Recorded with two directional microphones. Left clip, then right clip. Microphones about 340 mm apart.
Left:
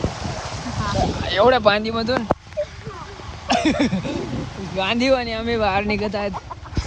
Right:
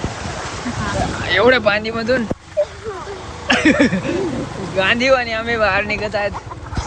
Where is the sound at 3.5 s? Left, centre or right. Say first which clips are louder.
Right 5 dB; centre.